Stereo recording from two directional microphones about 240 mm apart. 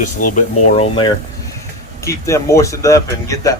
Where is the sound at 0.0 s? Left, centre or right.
Left.